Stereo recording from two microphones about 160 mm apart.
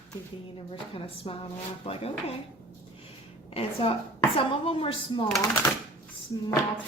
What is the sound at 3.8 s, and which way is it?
Speech, 35° left (ahead or behind).